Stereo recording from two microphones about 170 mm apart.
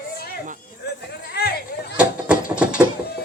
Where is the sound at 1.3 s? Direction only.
70° left (ahead or behind).